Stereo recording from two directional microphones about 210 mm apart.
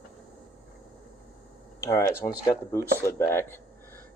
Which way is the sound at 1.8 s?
15° left (ahead or behind).